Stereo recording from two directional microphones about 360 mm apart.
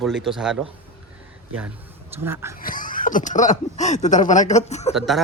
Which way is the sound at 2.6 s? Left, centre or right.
Left.